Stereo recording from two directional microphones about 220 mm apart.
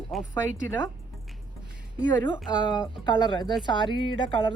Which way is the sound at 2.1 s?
15° left (ahead or behind).